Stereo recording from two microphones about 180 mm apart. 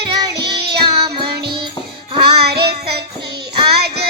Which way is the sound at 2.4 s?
65° right (ahead or behind).